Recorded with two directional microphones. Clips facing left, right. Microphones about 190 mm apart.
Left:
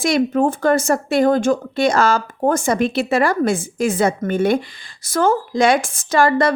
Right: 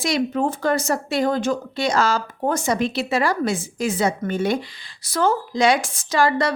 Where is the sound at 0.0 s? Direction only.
50° left (ahead or behind).